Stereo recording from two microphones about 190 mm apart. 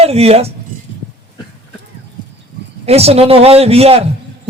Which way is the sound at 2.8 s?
35° right (ahead or behind).